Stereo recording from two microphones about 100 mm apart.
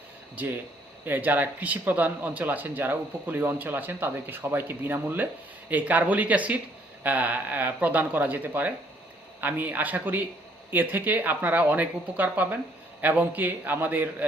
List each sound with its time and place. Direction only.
0.3 s a man's voice: 20° right (ahead or behind)